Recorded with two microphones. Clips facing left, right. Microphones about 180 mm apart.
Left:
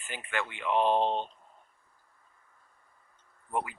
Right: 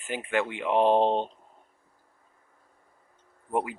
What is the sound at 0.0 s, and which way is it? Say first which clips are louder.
Speech: right 7 dB; 10° right (ahead or behind).